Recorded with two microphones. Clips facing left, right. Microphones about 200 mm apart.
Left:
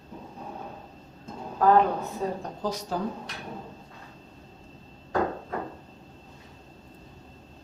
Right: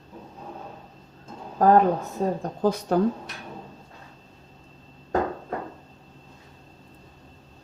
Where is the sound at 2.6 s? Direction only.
60° right (ahead or behind).